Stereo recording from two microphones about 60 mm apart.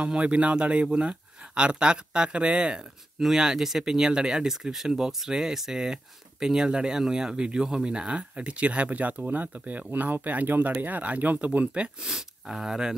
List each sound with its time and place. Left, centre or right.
0.0 s speech: centre